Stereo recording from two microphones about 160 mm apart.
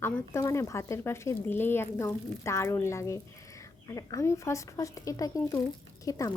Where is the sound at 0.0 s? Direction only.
15° left (ahead or behind).